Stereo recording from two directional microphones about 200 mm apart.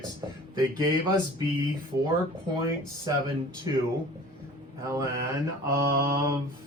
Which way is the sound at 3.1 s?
20° right (ahead or behind).